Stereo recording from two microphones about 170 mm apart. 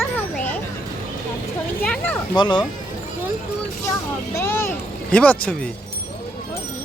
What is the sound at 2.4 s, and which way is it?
Speech, 25° left (ahead or behind).